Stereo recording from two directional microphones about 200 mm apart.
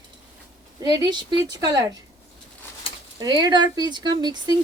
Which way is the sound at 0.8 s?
20° right (ahead or behind).